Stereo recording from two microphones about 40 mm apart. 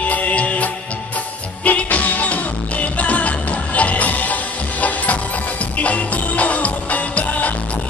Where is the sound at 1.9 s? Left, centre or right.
Left.